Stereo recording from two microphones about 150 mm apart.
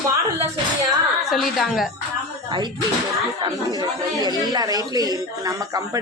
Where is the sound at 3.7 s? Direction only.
30° right (ahead or behind).